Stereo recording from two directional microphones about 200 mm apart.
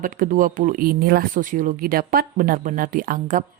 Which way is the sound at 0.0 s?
40° right (ahead or behind).